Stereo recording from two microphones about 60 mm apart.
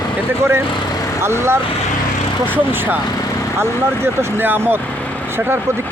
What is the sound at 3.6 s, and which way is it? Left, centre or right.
Speech, right.